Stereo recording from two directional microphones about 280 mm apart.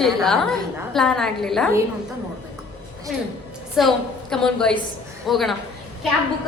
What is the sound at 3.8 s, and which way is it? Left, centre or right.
A woman's voice, centre.